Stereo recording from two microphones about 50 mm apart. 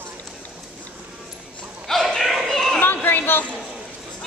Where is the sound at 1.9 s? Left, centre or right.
Centre.